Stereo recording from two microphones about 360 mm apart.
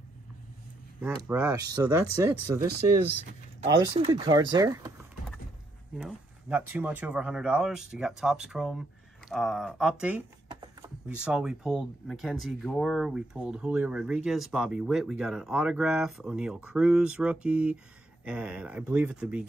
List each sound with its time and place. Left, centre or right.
1.0 s speech: centre
3.6 s speech: centre
5.9 s speech: centre